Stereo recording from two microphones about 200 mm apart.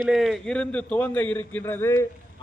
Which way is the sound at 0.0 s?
Centre (ahead or behind).